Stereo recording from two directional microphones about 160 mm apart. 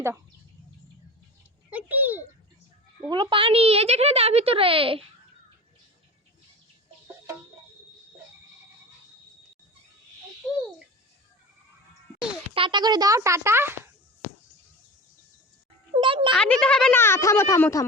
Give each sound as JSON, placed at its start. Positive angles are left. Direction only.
{"t": 1.7, "sound": "a sound", "side_deg": -10}
{"t": 3.1, "sound": "speech", "side_deg": -30}
{"t": 12.5, "sound": "speech", "side_deg": -30}
{"t": 15.9, "sound": "a child's voice", "side_deg": -30}
{"t": 16.3, "sound": "a child's voice", "side_deg": 5}
{"t": 17.0, "sound": "speech", "side_deg": 15}